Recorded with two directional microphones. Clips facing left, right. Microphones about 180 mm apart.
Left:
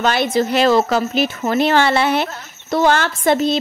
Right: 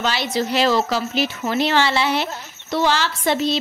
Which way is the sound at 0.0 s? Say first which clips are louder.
Left 5 dB; 55° left (ahead or behind).